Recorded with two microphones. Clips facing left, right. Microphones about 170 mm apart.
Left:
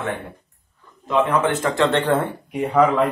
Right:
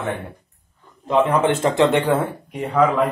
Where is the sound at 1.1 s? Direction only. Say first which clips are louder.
Right 2 dB; 10° right (ahead or behind).